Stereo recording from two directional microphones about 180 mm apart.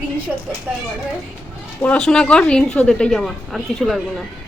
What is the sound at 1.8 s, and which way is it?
A woman's voice, 5° left (ahead or behind).